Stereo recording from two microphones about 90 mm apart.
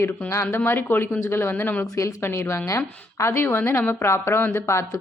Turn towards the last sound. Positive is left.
turn(degrees=30)  # may be behind; listen again after turning